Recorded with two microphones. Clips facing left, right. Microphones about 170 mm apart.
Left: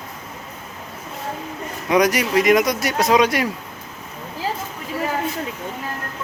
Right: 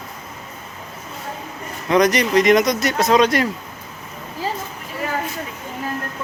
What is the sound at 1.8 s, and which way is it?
Speech, 10° left (ahead or behind).